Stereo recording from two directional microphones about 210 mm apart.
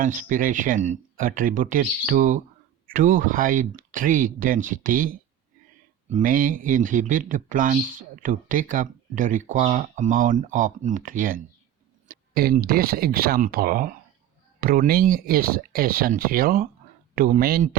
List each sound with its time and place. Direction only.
0.0 s speech: 35° right (ahead or behind)